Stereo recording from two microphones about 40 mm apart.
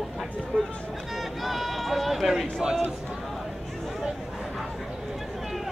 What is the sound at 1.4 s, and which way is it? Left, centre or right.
Run, centre.